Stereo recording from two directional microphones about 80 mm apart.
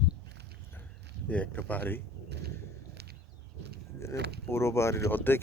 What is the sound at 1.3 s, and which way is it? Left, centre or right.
Speech, centre.